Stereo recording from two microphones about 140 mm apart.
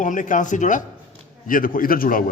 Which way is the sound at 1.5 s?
85° left.